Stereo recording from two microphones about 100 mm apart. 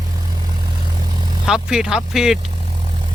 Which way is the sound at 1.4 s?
5° right (ahead or behind).